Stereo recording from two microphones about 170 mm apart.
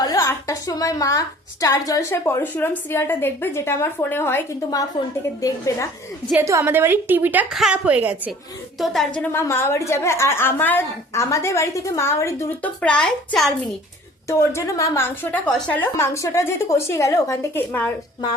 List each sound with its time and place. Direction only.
0.0 s a woman's voice: 20° left (ahead or behind)
6.3 s a woman's voice: 15° right (ahead or behind)
8.8 s a woman's voice: centre (ahead or behind)
9.3 s a woman's voice: 15° left (ahead or behind)
14.3 s a woman's voice: 15° left (ahead or behind)